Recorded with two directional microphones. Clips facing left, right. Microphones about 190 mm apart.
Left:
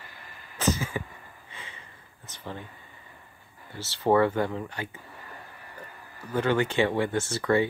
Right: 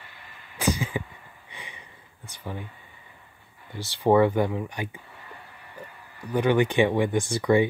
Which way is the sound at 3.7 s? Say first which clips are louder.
Right 3 dB; 15° right (ahead or behind).